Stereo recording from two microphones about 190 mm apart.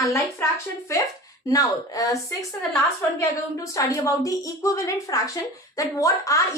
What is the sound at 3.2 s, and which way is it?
A woman's voice, 15° left (ahead or behind).